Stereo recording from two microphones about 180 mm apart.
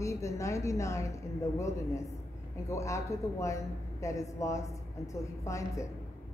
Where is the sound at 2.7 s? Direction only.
15° left (ahead or behind).